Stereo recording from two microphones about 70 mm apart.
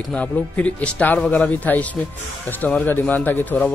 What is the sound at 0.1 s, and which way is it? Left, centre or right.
A man's voice, centre.